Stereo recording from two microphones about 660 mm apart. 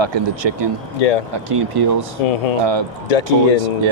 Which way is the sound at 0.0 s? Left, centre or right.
Right.